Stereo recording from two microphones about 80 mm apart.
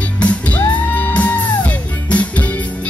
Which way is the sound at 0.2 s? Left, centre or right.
Centre.